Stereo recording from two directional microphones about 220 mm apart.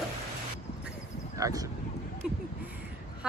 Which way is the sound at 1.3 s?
15° right (ahead or behind).